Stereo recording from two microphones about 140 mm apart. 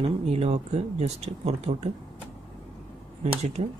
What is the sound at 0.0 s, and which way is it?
Speech, 50° right (ahead or behind).